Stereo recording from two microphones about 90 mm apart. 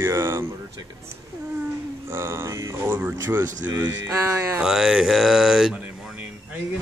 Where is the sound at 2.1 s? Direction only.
30° right (ahead or behind).